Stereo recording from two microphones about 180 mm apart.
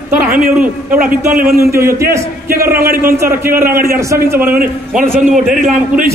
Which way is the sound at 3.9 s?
15° right (ahead or behind).